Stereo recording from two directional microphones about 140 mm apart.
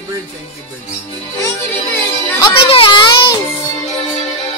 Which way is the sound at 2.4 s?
40° left (ahead or behind).